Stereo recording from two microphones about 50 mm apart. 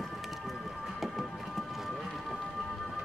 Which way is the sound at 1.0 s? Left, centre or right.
Centre.